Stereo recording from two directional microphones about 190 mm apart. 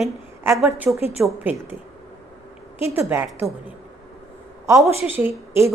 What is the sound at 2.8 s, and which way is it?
Speech, 10° right (ahead or behind).